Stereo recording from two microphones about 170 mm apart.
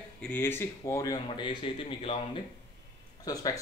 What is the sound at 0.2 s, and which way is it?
Speech, 10° left (ahead or behind).